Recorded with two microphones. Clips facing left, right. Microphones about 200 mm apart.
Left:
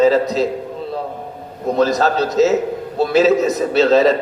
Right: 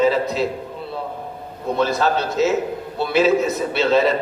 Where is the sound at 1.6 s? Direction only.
40° left (ahead or behind).